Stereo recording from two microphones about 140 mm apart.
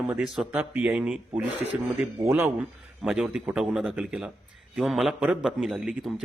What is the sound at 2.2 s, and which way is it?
A man's voice, 15° right (ahead or behind).